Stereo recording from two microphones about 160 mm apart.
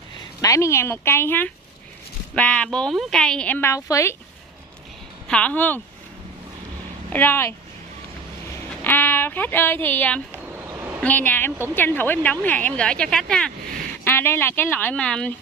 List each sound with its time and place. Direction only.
0.4 s a woman's voice: 20° left (ahead or behind)
5.3 s a woman's voice: 10° left (ahead or behind)
7.1 s a woman's voice: 15° left (ahead or behind)
8.8 s speech: 15° left (ahead or behind)
10.4 s a sound: 15° right (ahead or behind)
11.0 s a woman's voice: 10° left (ahead or behind)